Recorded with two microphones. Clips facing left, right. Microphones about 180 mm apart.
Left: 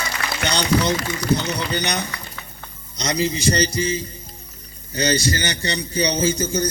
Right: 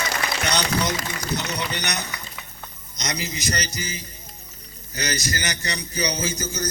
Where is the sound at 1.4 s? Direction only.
30° left (ahead or behind).